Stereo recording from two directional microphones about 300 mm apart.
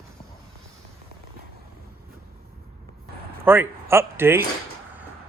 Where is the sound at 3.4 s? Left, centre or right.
Centre.